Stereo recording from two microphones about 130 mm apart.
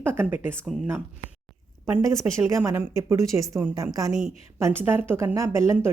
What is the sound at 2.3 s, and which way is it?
A woman's voice, 20° right (ahead or behind).